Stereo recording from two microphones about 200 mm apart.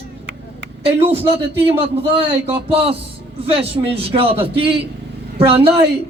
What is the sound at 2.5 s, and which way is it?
A woman's voice, 30° right (ahead or behind).